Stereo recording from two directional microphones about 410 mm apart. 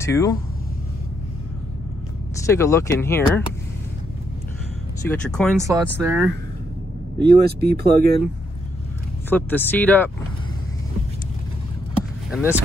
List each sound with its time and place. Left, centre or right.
0.0 s speech: centre
2.4 s speech: centre
5.0 s speech: centre
5.6 s speech: centre
7.2 s speech: right
9.3 s speech: centre
12.3 s speech: centre